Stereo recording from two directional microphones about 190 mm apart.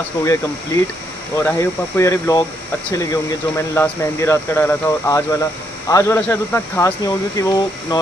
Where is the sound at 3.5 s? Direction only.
15° left (ahead or behind).